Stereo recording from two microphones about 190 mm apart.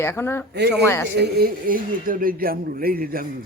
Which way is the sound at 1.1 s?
55° right (ahead or behind).